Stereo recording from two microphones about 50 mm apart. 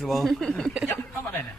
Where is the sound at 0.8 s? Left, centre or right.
Left.